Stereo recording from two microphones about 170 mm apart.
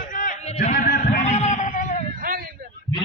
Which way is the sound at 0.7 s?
55° left (ahead or behind).